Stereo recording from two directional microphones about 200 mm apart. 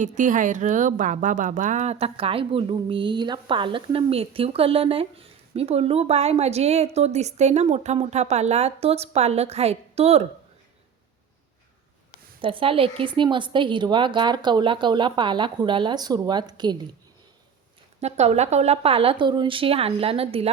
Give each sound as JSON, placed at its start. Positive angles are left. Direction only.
{"t": 0.2, "sound": "a woman's voice", "side_deg": -40}
{"t": 12.4, "sound": "speech", "side_deg": -25}
{"t": 18.0, "sound": "speech", "side_deg": -35}